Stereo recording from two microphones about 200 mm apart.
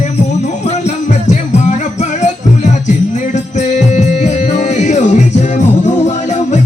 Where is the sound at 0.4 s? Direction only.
35° left (ahead or behind).